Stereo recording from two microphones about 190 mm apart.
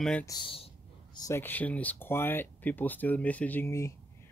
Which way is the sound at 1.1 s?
15° left (ahead or behind).